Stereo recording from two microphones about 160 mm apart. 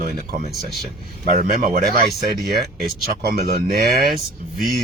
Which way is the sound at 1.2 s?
60° right (ahead or behind).